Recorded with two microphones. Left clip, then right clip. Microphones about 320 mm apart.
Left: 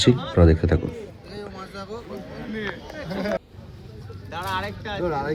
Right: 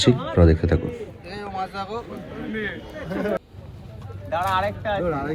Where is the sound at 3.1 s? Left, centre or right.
Left.